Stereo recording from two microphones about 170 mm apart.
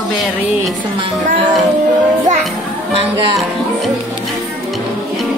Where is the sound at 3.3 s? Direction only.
Centre (ahead or behind).